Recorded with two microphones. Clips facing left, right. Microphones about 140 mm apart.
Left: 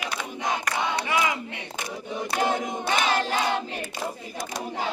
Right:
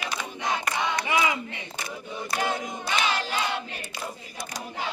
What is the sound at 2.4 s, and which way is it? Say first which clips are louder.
Crowd: left 4 dB; 50° left (ahead or behind).